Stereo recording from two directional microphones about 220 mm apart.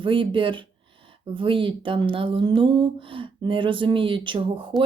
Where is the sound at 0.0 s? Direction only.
20° right (ahead or behind).